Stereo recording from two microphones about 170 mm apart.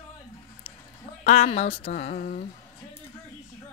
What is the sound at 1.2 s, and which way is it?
A woman's voice, 40° left (ahead or behind).